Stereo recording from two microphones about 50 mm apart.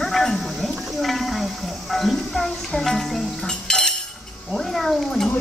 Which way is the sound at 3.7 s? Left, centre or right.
Centre.